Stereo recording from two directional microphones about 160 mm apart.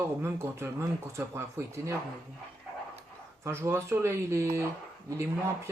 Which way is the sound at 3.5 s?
15° right (ahead or behind).